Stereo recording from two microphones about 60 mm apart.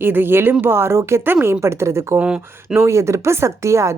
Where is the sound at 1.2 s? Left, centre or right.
Right.